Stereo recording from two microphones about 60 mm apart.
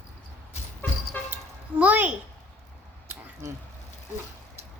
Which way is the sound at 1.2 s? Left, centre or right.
Left.